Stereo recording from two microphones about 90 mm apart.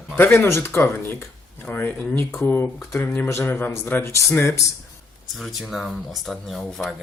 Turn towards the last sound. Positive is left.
turn(degrees=0)  # may be behind; listen again after turning